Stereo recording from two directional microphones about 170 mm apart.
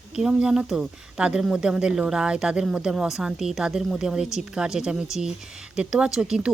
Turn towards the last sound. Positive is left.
turn(degrees=-5)  # may be behind; listen again after turning